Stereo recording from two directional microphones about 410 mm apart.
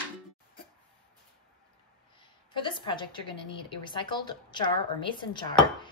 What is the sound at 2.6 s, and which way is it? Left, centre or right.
A woman's voice, centre.